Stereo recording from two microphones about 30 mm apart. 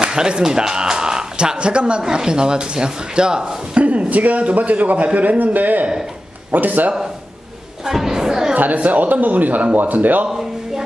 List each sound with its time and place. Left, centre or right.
0.0 s speech: right
1.6 s a woman's voice: right
2.0 s speech: right
4.1 s a man's voice: right
7.8 s speech: centre
8.5 s a man's voice: right